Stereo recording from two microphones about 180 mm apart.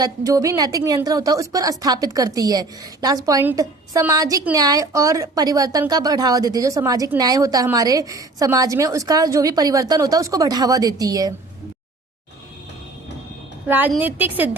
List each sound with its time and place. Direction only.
0.0 s a woman's voice: 20° right (ahead or behind)
13.7 s a woman's voice: 10° right (ahead or behind)